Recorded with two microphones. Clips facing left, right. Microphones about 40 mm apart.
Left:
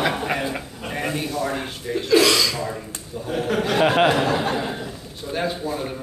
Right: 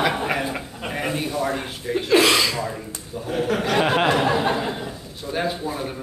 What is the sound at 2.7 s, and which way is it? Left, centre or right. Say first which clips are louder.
A man's voice: left 1 dB; centre.